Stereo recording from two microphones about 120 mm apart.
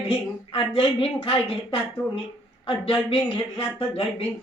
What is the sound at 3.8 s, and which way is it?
Speech, 50° left (ahead or behind).